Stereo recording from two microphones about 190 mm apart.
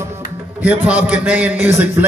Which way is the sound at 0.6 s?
10° right (ahead or behind).